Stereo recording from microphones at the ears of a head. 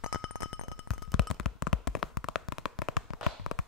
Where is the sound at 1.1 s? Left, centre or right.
Left.